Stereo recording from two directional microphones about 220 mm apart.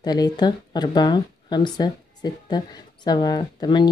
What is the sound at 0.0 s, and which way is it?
Speech, 20° left (ahead or behind).